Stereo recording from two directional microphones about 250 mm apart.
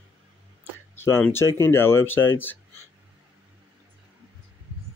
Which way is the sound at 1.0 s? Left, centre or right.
Centre.